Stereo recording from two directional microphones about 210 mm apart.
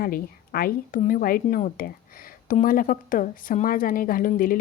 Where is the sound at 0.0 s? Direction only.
45° left (ahead or behind).